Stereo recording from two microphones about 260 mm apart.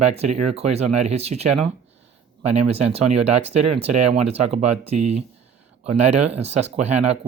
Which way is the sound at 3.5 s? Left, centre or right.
Right.